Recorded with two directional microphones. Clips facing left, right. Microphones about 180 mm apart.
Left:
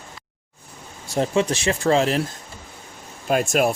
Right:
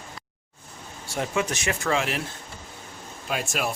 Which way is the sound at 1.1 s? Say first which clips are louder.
Left 6 dB; 30° left (ahead or behind).